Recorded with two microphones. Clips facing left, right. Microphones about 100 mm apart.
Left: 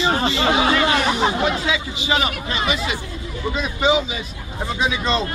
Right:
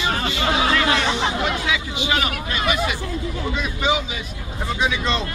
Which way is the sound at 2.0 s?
10° left (ahead or behind).